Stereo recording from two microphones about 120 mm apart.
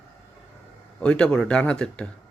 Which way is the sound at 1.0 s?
5° left (ahead or behind).